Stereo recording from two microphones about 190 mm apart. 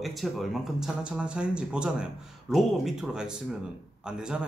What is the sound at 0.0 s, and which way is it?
Speech, centre (ahead or behind).